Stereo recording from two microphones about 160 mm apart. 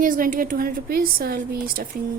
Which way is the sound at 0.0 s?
55° right (ahead or behind).